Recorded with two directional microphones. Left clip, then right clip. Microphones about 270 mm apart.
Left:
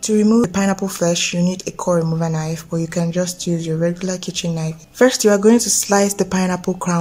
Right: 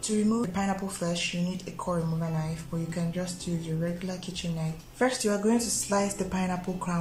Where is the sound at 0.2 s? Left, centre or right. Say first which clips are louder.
Left 12 dB; left.